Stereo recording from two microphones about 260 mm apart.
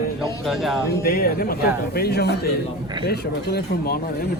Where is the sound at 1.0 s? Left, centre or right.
Left.